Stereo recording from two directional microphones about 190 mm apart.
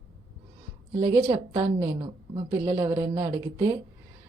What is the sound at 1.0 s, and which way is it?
A woman's voice, 25° right (ahead or behind).